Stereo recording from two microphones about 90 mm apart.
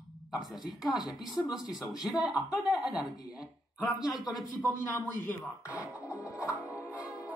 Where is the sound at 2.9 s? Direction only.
50° left (ahead or behind).